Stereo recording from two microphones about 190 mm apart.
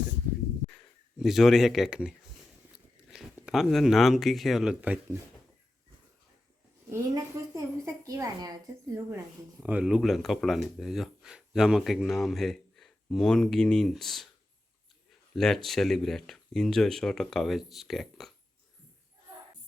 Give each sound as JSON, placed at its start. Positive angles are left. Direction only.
{"t": 1.2, "sound": "speech", "side_deg": 0}
{"t": 6.9, "sound": "a woman's voice", "side_deg": -20}
{"t": 9.6, "sound": "speech", "side_deg": -10}
{"t": 15.4, "sound": "speech", "side_deg": 0}